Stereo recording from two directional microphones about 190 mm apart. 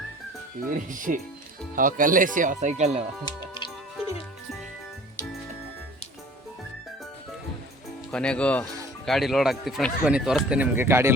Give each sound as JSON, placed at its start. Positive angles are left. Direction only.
{"t": 0.7, "sound": "speech", "side_deg": -45}
{"t": 3.2, "sound": "music", "side_deg": 25}
{"t": 8.1, "sound": "speech", "side_deg": 5}